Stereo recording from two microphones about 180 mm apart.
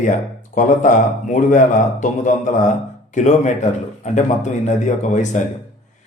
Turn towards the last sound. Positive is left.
turn(degrees=40)  # may be behind; listen again after turning